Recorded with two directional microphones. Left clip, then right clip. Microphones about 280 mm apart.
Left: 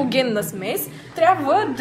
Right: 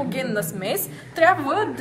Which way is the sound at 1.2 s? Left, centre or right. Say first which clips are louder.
Left 2 dB; centre.